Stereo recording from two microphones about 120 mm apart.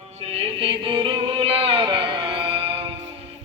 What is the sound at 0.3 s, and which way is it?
Chant, 45° right (ahead or behind).